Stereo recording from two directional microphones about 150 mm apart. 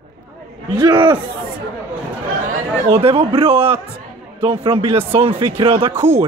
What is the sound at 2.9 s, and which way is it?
A man's voice, 40° right (ahead or behind).